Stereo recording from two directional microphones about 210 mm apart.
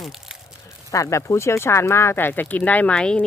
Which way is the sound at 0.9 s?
15° left (ahead or behind).